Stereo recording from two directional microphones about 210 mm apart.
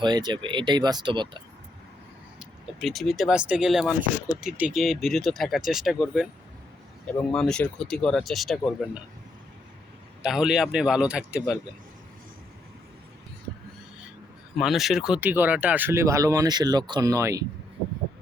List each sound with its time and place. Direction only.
0.0 s speech: 20° right (ahead or behind)
2.4 s speech: centre (ahead or behind)
10.2 s speech: centre (ahead or behind)
14.6 s speech: centre (ahead or behind)